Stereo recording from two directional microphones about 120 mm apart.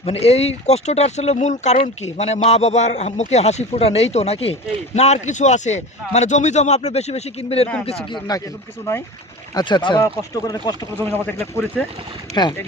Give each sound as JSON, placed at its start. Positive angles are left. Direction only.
{"t": 0.0, "sound": "a man's voice", "side_deg": 55}
{"t": 8.3, "sound": "speech", "side_deg": 35}
{"t": 8.9, "sound": "speech", "side_deg": 20}
{"t": 9.6, "sound": "speech", "side_deg": 40}
{"t": 11.0, "sound": "speech", "side_deg": 20}
{"t": 12.3, "sound": "speech", "side_deg": 35}